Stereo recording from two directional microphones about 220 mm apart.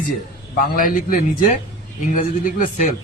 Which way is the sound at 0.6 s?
35° left (ahead or behind).